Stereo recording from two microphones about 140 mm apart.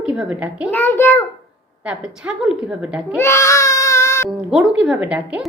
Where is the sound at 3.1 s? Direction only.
20° left (ahead or behind).